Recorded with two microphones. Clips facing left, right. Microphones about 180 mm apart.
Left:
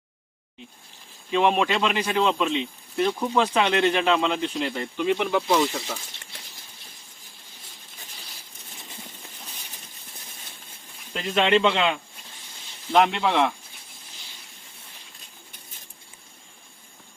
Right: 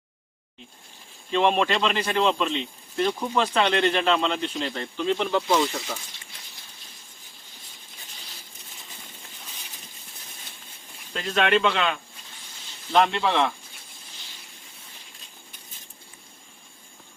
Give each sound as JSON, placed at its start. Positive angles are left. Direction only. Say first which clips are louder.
{"t": 1.3, "sound": "speech", "louder": "even", "side_deg": 10}
{"t": 11.1, "sound": "speech", "louder": "left 1 dB", "side_deg": 15}
{"t": 12.9, "sound": "speech", "louder": "left 1 dB", "side_deg": 10}